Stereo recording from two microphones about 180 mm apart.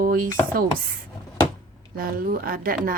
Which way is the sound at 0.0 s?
55° right (ahead or behind).